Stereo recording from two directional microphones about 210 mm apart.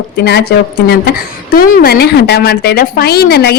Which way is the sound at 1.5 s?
45° left (ahead or behind).